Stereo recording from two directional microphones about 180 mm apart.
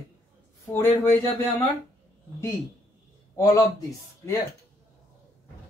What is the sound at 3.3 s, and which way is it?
Speech, 15° left (ahead or behind).